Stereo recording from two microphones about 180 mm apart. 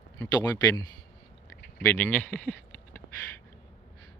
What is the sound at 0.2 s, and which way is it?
Speech, 20° left (ahead or behind).